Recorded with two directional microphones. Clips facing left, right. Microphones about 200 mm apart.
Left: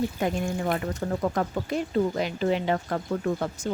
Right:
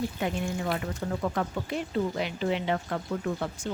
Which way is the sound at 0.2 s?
45° left (ahead or behind).